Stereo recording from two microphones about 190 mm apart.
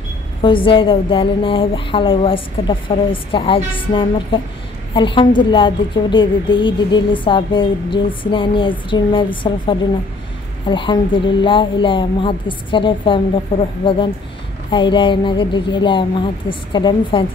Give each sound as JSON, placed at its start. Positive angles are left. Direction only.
{"t": 0.4, "sound": "a woman's voice", "side_deg": 25}